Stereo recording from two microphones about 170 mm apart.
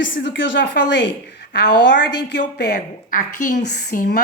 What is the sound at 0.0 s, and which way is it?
A woman's voice, 90° left.